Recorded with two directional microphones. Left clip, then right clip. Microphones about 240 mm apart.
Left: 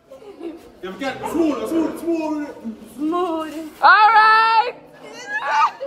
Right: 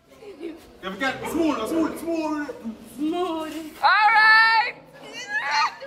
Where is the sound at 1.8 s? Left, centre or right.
Left.